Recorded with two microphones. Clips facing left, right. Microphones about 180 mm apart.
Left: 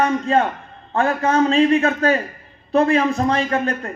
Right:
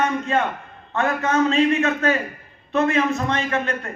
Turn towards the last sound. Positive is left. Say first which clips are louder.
# left 3 dB
turn(degrees=35)  # may be behind; listen again after turning